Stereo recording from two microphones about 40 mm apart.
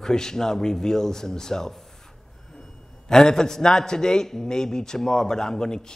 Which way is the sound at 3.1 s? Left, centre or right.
Centre.